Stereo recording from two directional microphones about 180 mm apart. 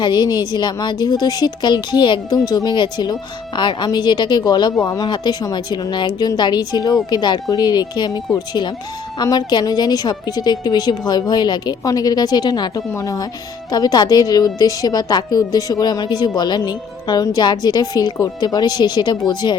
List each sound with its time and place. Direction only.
0.0 s a woman's voice: 25° left (ahead or behind)